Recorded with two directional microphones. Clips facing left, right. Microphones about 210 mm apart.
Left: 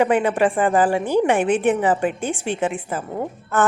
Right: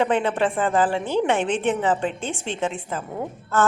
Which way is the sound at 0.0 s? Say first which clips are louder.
Left 3 dB; 10° left (ahead or behind).